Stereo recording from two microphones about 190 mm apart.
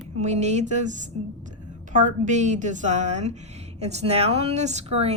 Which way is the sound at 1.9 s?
40° right (ahead or behind).